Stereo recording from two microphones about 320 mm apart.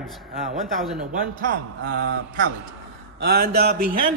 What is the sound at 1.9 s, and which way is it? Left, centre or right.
Speech, right.